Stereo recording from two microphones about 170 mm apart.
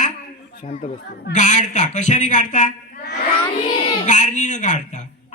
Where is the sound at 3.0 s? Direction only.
70° left (ahead or behind).